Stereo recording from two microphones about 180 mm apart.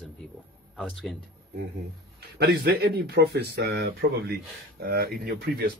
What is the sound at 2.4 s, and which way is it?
Speech, 65° right (ahead or behind).